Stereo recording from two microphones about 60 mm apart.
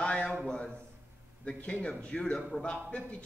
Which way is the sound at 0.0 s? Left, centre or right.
Centre.